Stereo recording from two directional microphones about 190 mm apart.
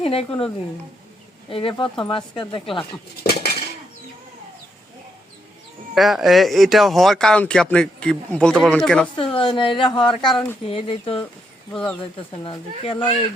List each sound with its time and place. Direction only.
0.0 s speech: 30° left (ahead or behind)
3.2 s dishes: 55° left (ahead or behind)
5.9 s speech: centre (ahead or behind)
9.1 s speech: 25° left (ahead or behind)
11.7 s speech: 5° left (ahead or behind)
12.4 s speech: 25° left (ahead or behind)